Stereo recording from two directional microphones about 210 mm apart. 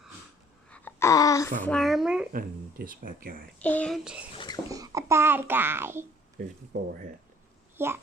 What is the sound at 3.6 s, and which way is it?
Speech, 5° left (ahead or behind).